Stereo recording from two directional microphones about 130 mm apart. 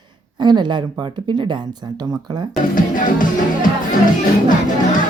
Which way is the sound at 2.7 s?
90° left.